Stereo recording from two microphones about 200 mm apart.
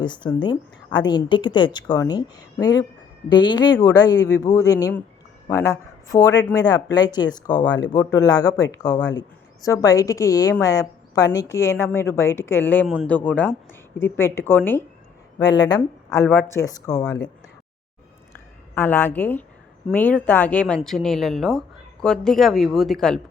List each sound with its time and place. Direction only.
0.0 s a woman's voice: 20° left (ahead or behind)
18.7 s a woman's voice: 10° left (ahead or behind)